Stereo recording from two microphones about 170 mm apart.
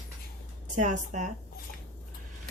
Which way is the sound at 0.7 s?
45° right (ahead or behind).